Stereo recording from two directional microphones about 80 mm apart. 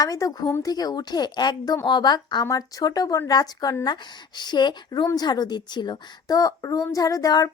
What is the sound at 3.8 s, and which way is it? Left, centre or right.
A woman's voice, left.